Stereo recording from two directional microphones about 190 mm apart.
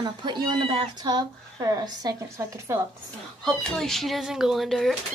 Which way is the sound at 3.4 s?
Centre (ahead or behind).